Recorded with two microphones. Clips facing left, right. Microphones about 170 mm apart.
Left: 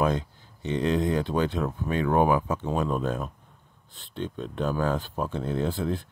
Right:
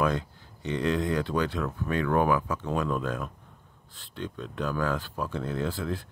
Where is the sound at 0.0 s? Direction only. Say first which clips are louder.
Left 2 dB; 20° left (ahead or behind).